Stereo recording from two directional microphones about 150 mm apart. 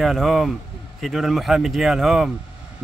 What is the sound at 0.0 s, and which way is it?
Speech, centre (ahead or behind).